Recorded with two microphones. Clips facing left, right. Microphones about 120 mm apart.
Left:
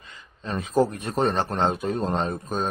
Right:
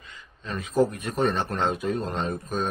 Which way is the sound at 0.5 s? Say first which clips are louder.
Left 1 dB; 30° left (ahead or behind).